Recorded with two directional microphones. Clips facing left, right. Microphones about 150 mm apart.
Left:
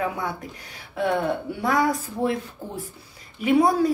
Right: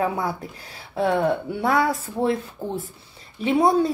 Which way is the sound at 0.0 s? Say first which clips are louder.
Right 3 dB; 30° right (ahead or behind).